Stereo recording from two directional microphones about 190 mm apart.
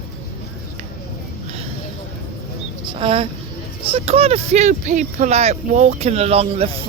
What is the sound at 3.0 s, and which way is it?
A man's voice, 30° right (ahead or behind).